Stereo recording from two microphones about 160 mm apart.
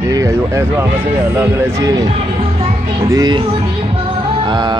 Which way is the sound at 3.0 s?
25° right (ahead or behind).